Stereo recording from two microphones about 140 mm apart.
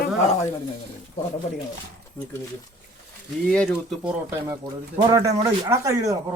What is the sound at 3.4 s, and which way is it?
Speech, 5° left (ahead or behind).